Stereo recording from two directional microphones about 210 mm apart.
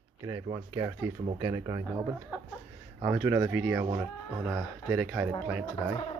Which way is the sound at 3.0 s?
10° right (ahead or behind).